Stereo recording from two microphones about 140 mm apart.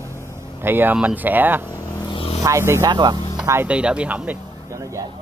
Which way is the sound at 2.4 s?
20° right (ahead or behind).